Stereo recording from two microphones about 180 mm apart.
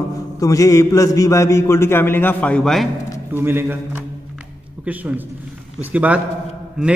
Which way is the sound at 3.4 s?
10° right (ahead or behind).